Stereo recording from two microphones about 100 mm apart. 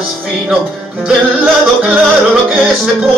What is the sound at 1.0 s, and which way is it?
Music, 10° right (ahead or behind).